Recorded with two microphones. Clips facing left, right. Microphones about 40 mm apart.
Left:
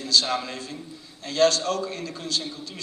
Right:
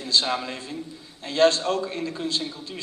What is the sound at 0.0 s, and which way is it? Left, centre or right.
A man's voice, right.